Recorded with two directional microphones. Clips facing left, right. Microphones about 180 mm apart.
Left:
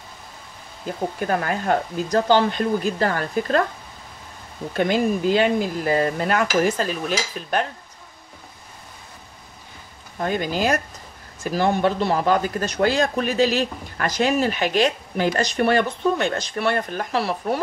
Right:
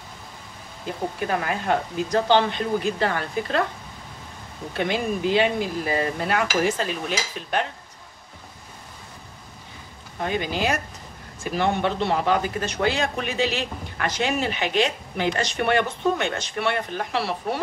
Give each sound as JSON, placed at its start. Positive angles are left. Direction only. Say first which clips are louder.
{"t": 1.2, "sound": "dishes", "louder": "left 3 dB", "side_deg": 45}
{"t": 4.7, "sound": "dishes", "louder": "left 5 dB", "side_deg": 45}
{"t": 10.2, "sound": "dishes", "louder": "left 3 dB", "side_deg": 45}
{"t": 11.4, "sound": "speech", "louder": "left 3 dB", "side_deg": 40}